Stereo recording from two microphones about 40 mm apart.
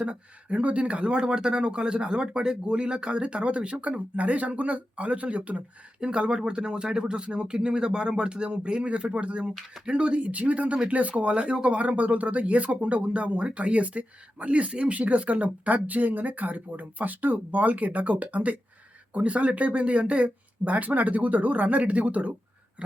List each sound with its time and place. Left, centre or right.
0.0 s speech: right
11.8 s speech: right